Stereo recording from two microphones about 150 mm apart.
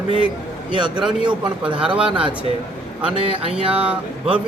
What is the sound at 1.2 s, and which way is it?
Speech, 30° right (ahead or behind).